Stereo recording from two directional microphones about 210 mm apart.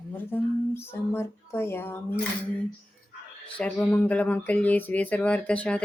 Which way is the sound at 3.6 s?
5° left (ahead or behind).